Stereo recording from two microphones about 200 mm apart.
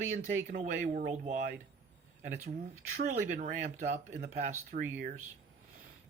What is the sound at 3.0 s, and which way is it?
Speech, 40° right (ahead or behind).